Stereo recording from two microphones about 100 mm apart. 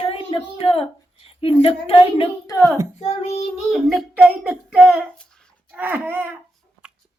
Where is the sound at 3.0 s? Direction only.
90° left.